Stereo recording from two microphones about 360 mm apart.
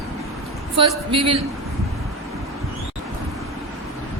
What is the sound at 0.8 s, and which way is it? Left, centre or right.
Speech, centre.